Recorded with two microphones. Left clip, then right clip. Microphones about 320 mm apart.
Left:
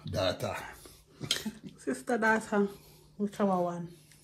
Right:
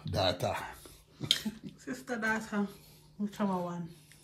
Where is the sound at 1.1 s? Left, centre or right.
Centre.